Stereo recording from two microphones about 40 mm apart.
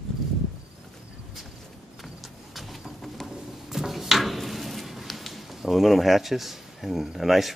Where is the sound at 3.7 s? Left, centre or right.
Centre.